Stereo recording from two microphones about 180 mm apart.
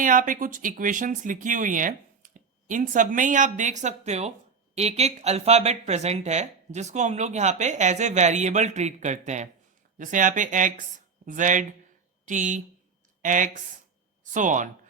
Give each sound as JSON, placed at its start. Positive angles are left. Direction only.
{"t": 0.0, "sound": "speech", "side_deg": -50}